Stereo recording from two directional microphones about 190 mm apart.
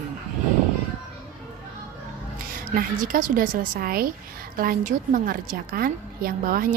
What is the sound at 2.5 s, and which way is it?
A woman's voice, 45° right (ahead or behind).